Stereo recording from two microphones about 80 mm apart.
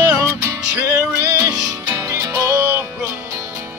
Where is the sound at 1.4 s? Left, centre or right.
Right.